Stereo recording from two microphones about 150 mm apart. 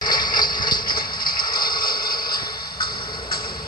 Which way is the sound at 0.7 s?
75° left (ahead or behind).